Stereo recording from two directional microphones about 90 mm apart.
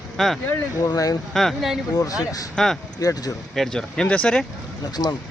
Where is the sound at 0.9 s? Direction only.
45° left (ahead or behind).